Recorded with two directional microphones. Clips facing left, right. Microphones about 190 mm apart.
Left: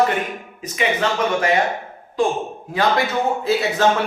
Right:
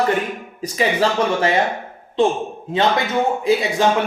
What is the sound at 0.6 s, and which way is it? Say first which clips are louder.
Speech: right 3 dB; 35° right (ahead or behind).